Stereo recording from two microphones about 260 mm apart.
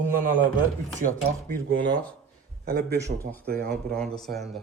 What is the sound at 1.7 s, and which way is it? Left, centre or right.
Speech, right.